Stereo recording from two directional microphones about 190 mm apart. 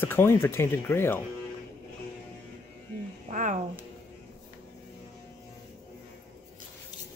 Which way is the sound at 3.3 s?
40° right (ahead or behind).